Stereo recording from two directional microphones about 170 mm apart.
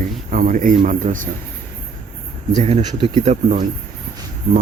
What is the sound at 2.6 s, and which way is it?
Speech, 35° right (ahead or behind).